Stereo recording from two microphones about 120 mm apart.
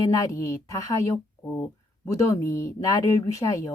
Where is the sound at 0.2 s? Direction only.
25° left (ahead or behind).